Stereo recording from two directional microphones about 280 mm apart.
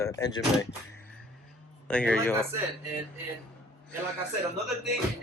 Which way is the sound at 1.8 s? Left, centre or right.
Centre.